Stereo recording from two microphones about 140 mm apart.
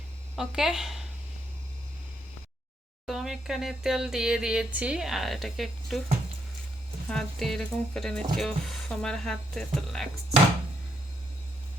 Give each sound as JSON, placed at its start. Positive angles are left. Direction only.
{"t": 0.3, "sound": "a woman's voice", "side_deg": -5}
{"t": 3.1, "sound": "speech", "side_deg": 0}
{"t": 7.1, "sound": "speech", "side_deg": 5}